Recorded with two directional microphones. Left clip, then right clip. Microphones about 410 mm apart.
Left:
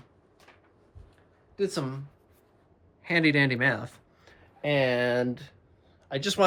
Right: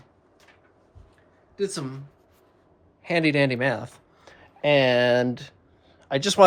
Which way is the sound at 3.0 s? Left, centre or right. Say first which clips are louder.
Right 2 dB; centre.